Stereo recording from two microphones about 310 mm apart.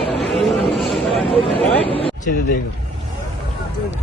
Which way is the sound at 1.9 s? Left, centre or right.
Left.